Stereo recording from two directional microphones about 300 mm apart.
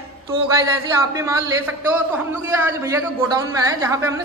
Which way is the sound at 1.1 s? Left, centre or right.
Centre.